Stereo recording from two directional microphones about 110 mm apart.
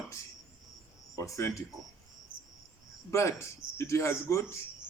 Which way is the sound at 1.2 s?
25° left (ahead or behind).